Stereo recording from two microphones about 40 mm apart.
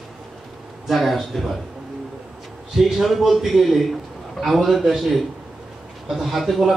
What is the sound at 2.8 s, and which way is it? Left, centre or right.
A man's voice, centre.